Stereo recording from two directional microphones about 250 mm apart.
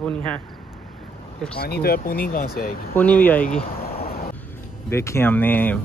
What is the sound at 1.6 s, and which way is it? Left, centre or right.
Speech, left.